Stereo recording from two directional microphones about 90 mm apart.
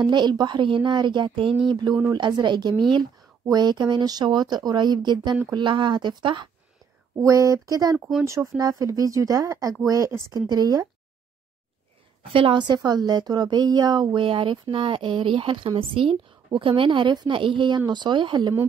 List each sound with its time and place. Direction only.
0.0 s speech: 55° right (ahead or behind); by 1.6 s 70° right (ahead or behind)
2.1 s speech: 60° right (ahead or behind)
7.2 s speech: 40° right (ahead or behind)
12.3 s a woman's voice: 90° right
12.5 s speech: 55° right (ahead or behind)